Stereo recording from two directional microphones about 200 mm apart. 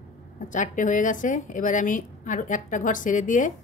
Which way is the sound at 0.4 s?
40° left (ahead or behind).